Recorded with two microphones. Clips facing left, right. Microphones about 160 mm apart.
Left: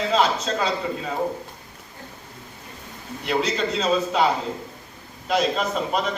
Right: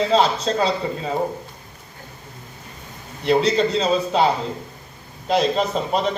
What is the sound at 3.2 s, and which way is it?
A man's voice, 30° right (ahead or behind).